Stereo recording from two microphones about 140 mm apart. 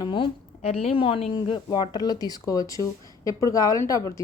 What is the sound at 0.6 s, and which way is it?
Speech, 45° left (ahead or behind).